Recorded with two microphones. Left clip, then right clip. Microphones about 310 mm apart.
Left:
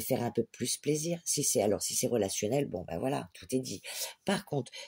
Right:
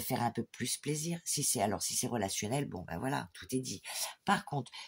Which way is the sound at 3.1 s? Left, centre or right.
Centre.